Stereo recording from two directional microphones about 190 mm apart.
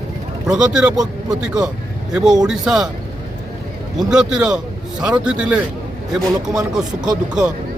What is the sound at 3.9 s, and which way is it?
Speech, 5° right (ahead or behind).